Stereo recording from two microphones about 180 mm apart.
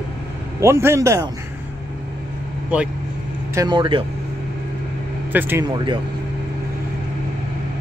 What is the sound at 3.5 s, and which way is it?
Speech, 25° right (ahead or behind).